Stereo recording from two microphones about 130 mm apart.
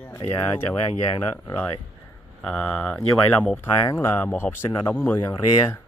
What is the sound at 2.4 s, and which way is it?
Speech, 10° left (ahead or behind).